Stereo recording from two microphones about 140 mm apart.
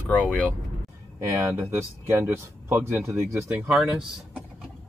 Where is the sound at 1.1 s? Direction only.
20° right (ahead or behind).